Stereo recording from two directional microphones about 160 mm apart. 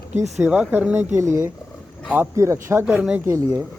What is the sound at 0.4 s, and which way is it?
Speech, 10° right (ahead or behind).